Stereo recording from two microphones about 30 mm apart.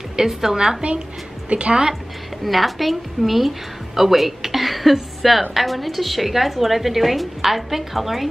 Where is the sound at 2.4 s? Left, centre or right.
Centre.